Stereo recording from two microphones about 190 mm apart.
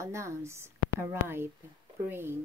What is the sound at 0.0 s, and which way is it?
Speech, 15° right (ahead or behind).